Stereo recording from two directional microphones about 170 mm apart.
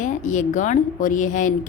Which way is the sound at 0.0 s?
50° left (ahead or behind).